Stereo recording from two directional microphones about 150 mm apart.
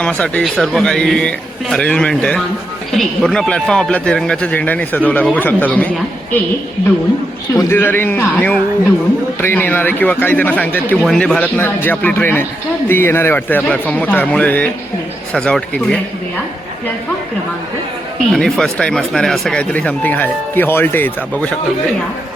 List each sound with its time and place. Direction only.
0.0 s speech: 10° left (ahead or behind)
7.5 s speech: 15° left (ahead or behind)
18.3 s speech: centre (ahead or behind)